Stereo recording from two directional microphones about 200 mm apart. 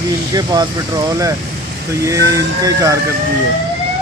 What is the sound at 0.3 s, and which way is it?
Speech, 20° right (ahead or behind).